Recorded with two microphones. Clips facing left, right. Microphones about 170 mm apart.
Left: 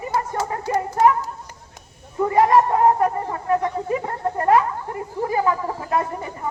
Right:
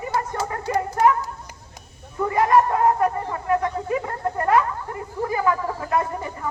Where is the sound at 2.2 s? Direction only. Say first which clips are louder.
Left 2 dB; 30° left (ahead or behind).